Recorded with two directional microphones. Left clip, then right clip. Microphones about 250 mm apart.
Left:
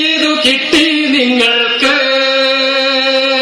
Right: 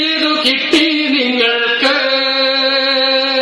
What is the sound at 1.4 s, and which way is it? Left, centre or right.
Mantra, left.